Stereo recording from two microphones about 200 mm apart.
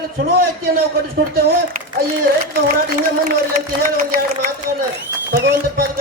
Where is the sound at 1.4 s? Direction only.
45° right (ahead or behind).